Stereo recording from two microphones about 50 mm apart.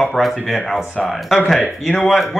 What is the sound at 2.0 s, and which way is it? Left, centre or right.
Speech, centre.